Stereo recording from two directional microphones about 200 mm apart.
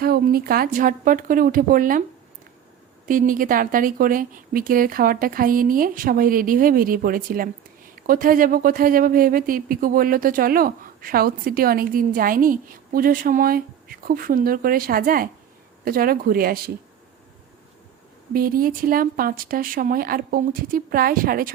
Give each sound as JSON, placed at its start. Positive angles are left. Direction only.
{"t": 0.0, "sound": "speech", "side_deg": -50}
{"t": 3.1, "sound": "speech", "side_deg": -45}
{"t": 18.3, "sound": "speech", "side_deg": -45}